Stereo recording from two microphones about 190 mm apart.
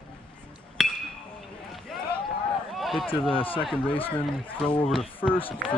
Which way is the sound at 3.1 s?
25° left (ahead or behind).